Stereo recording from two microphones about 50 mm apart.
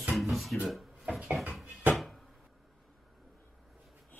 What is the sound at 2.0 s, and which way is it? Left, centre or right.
Cupboard open or close, centre.